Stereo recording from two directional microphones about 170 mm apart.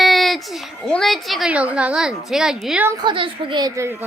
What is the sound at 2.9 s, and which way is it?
A woman's voice, 30° right (ahead or behind).